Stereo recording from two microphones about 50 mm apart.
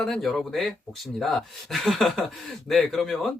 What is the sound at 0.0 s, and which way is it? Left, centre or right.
Speech, centre.